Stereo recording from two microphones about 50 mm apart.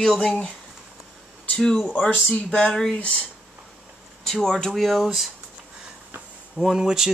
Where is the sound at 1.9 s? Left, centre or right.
Centre.